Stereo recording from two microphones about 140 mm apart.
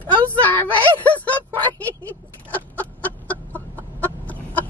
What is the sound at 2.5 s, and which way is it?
Chicken, 10° left (ahead or behind).